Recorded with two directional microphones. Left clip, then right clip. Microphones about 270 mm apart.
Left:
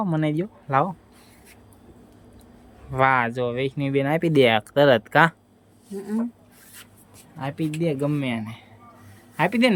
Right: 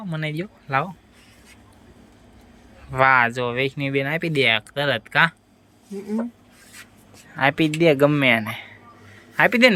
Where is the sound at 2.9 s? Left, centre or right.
Centre.